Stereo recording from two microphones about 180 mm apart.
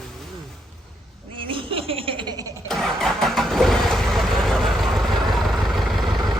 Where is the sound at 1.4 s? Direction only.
30° right (ahead or behind).